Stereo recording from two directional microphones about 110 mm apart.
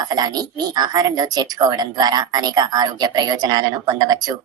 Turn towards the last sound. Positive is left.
turn(degrees=-35)  # may be behind; listen again after turning